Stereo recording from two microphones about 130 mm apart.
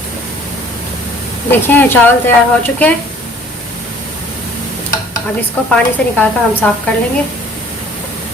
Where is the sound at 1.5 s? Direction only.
15° left (ahead or behind).